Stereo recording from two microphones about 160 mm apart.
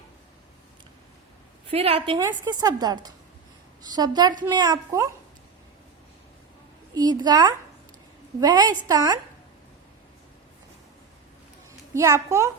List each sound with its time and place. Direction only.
1.7 s a woman's voice: 35° right (ahead or behind)
2.1 s a woman's voice: 25° right (ahead or behind)
6.9 s a woman's voice: 25° right (ahead or behind)
11.9 s a woman's voice: 20° right (ahead or behind)